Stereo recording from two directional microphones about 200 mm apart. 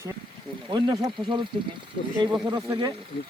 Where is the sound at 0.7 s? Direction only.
20° right (ahead or behind).